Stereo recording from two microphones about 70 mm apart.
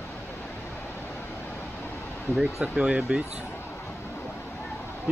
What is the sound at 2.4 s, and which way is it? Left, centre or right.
Speech, centre.